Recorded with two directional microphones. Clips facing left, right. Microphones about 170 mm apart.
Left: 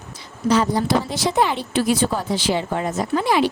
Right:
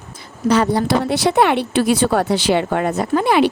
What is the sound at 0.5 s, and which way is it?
Speech, 65° right (ahead or behind).